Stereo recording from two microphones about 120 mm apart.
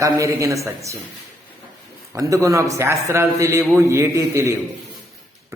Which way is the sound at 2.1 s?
25° right (ahead or behind).